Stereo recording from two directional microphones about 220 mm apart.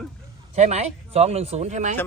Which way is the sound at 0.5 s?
30° right (ahead or behind).